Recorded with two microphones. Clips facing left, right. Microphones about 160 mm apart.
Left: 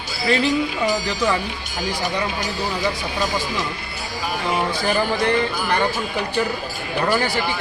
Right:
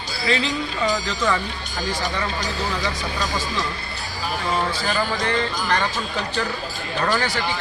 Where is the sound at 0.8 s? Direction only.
10° left (ahead or behind).